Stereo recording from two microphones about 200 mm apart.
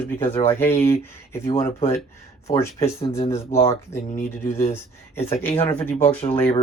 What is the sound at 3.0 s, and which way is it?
Speech, 30° left (ahead or behind).